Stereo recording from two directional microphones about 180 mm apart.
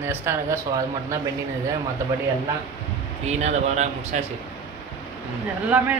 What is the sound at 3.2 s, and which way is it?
Speech, 40° right (ahead or behind).